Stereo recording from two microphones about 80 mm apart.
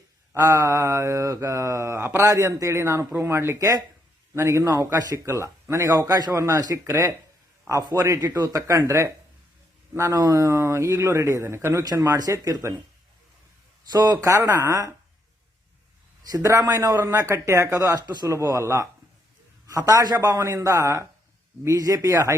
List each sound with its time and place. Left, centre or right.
0.3 s a man's voice: right
2.2 s a man's voice: right
5.1 s a man's voice: right
10.1 s a man's voice: right
13.9 s a man's voice: right
14.3 s a man's voice: right
16.3 s a man's voice: right
18.3 s a man's voice: right